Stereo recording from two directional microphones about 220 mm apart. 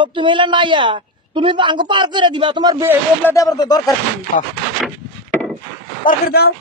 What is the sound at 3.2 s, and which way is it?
Speech, 15° left (ahead or behind).